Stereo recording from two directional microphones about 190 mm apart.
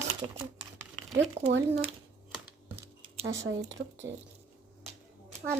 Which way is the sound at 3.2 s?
70° right (ahead or behind).